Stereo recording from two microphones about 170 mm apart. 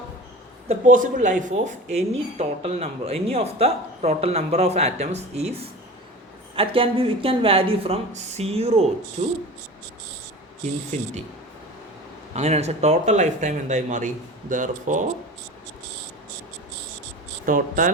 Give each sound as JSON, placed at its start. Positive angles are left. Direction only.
{"t": 0.7, "sound": "speech", "side_deg": -50}
{"t": 10.9, "sound": "speech", "side_deg": -40}
{"t": 12.3, "sound": "speech", "side_deg": -40}
{"t": 17.4, "sound": "speech", "side_deg": -50}